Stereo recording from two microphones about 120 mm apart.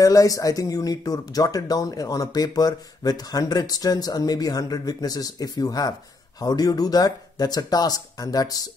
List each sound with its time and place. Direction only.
0.0 s speech: 30° left (ahead or behind)